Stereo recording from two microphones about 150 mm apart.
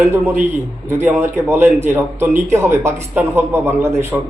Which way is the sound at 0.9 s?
15° right (ahead or behind).